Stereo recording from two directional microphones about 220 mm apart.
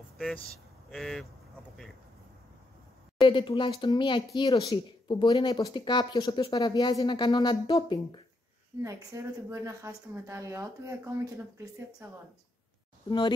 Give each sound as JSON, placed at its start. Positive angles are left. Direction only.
{"t": 0.8, "sound": "speech", "side_deg": 0}
{"t": 3.2, "sound": "speech", "side_deg": 20}
{"t": 8.8, "sound": "a woman's voice", "side_deg": -15}